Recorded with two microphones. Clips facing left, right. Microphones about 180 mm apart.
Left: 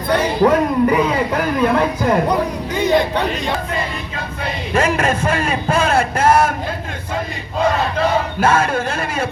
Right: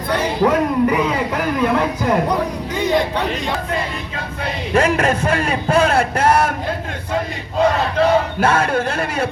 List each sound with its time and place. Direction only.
0.4 s a sound: 45° left (ahead or behind)
4.7 s a man's voice: 65° right (ahead or behind)
7.9 s a man's voice: 65° right (ahead or behind)